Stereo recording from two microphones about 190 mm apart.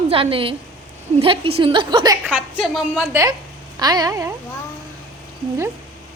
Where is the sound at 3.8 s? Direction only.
20° right (ahead or behind).